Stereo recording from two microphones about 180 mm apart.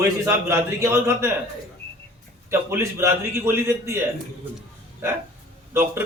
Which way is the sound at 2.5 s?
15° right (ahead or behind).